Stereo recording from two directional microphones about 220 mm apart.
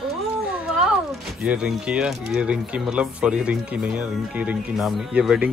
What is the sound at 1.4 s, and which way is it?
Speech, 5° right (ahead or behind).